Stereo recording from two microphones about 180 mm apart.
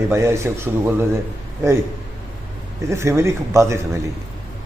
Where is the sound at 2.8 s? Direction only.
15° right (ahead or behind).